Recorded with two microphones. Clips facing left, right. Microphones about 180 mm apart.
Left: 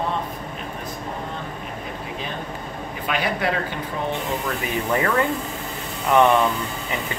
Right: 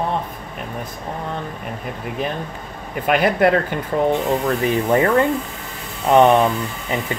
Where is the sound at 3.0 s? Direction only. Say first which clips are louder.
Right 9 dB; 50° right (ahead or behind).